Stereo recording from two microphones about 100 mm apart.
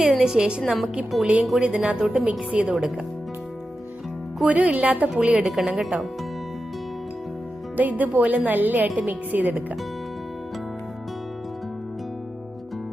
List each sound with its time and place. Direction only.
0.0 s a woman's voice: 5° right (ahead or behind)
4.4 s a woman's voice: 15° right (ahead or behind)
7.8 s a woman's voice: 15° right (ahead or behind)